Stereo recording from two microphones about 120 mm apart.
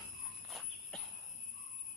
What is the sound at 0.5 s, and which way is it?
Jingle bell, centre (ahead or behind).